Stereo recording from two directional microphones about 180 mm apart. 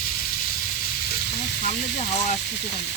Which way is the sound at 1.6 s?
40° left (ahead or behind).